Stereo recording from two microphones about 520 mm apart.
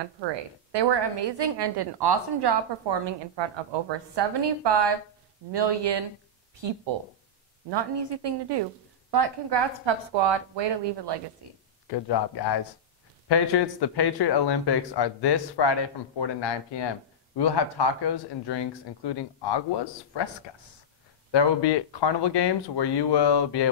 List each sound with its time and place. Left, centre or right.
0.3 s a woman's voice: right
11.4 s a sound: right
11.9 s speech: left
21.3 s speech: left